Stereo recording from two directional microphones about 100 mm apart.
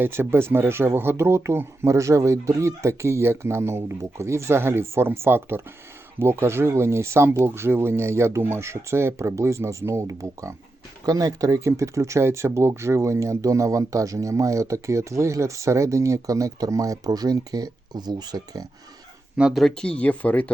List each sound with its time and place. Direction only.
0.0 s speech: 25° right (ahead or behind); by 18.6 s 45° right (ahead or behind)
19.4 s speech: 5° right (ahead or behind); by 20.5 s 15° left (ahead or behind)